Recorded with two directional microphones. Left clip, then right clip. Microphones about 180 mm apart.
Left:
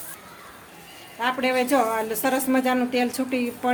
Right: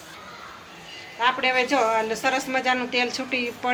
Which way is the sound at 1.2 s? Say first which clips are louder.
Right 2 dB; 75° left (ahead or behind).